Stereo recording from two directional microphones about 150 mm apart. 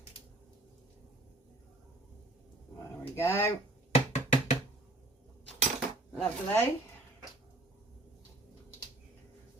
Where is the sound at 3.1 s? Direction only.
15° left (ahead or behind).